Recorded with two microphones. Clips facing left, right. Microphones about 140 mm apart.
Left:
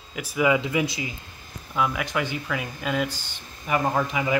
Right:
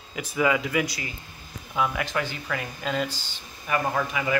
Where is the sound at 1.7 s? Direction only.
Centre (ahead or behind).